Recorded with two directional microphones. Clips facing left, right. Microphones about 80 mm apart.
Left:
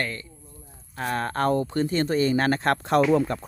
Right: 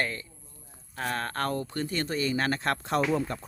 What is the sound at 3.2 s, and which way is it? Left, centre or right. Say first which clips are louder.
Speech: left 7 dB; left.